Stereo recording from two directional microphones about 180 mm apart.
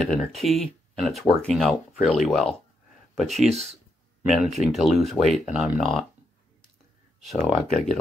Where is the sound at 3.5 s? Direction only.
35° right (ahead or behind).